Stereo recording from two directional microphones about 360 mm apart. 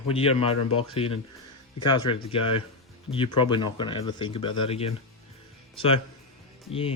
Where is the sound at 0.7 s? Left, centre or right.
Left.